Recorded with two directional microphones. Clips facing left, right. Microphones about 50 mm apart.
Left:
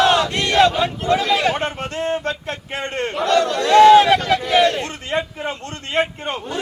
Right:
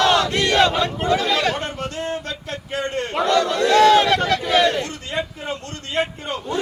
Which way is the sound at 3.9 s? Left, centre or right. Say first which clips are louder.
Left 4 dB; centre.